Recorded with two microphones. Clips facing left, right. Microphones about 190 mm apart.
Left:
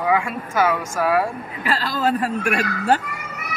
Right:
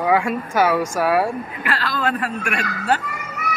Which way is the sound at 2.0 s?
40° left (ahead or behind).